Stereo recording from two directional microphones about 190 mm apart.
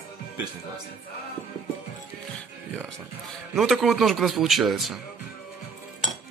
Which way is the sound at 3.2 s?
Centre (ahead or behind).